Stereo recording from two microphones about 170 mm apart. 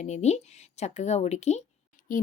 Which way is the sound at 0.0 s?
40° left (ahead or behind).